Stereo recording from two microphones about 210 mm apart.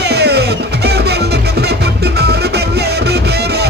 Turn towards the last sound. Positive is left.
turn(degrees=-50)  # may be behind; listen again after turning